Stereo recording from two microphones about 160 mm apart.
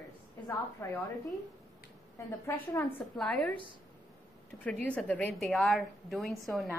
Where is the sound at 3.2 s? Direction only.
5° left (ahead or behind).